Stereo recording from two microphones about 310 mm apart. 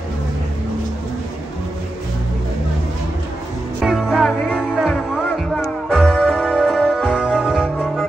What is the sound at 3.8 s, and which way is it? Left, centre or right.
Music, centre.